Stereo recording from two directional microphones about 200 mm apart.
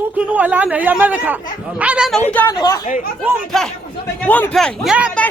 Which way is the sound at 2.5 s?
20° left (ahead or behind).